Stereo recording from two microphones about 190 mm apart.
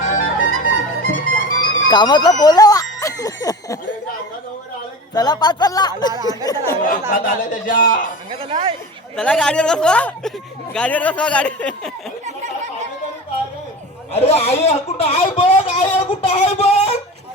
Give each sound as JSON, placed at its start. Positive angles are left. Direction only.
{"t": 0.0, "sound": "music", "side_deg": 45}
{"t": 1.9, "sound": "speech", "side_deg": 25}
{"t": 2.4, "sound": "a sound", "side_deg": 20}
{"t": 5.1, "sound": "speech", "side_deg": 20}
{"t": 7.1, "sound": "a man's voice", "side_deg": 45}
{"t": 8.3, "sound": "speech", "side_deg": -30}
{"t": 9.1, "sound": "speech", "side_deg": 5}
{"t": 14.1, "sound": "speech", "side_deg": 30}